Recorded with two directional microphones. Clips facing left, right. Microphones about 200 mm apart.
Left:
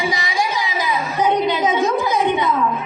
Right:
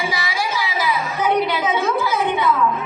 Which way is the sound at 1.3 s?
20° left (ahead or behind).